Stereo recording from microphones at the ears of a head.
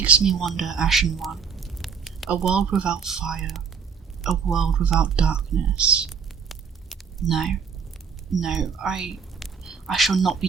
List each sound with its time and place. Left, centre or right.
0.0 s speech: right
7.2 s speech: right